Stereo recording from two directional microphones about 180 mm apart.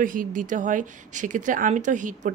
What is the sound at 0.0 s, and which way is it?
Speech, 50° right (ahead or behind).